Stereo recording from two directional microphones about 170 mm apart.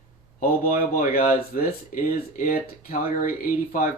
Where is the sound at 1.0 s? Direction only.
60° left (ahead or behind).